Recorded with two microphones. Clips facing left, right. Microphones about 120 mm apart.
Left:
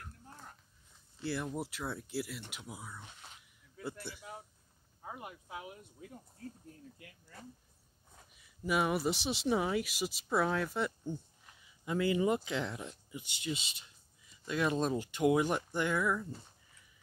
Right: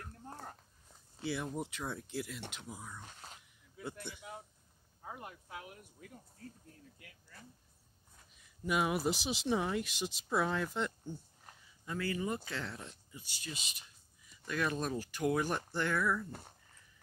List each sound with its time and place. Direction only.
0.2 s a sound: 40° right (ahead or behind)
1.2 s speech: centre (ahead or behind)
4.0 s speech: centre (ahead or behind); by 6.1 s 25° left (ahead or behind)
8.4 s speech: centre (ahead or behind)
11.8 s speech: 15° left (ahead or behind)
16.3 s speech: 60° right (ahead or behind)